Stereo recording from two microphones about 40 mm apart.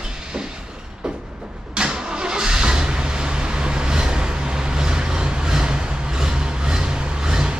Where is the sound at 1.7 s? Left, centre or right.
Centre.